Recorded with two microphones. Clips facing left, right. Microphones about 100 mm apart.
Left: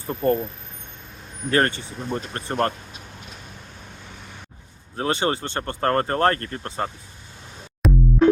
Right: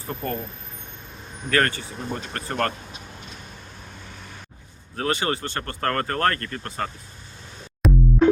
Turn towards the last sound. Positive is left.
turn(degrees=0)  # may be behind; listen again after turning